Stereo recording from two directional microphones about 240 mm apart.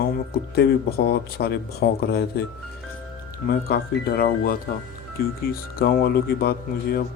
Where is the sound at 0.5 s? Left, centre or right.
Left.